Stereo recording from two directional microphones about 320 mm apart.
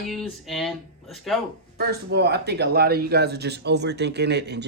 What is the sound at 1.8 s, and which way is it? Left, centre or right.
Speech, right.